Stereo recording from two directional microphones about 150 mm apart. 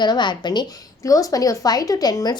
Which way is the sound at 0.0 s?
30° left (ahead or behind).